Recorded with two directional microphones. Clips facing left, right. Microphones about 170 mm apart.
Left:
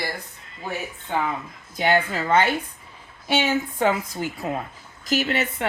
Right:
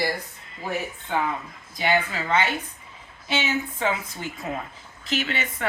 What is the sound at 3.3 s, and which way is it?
Speech, 55° left (ahead or behind).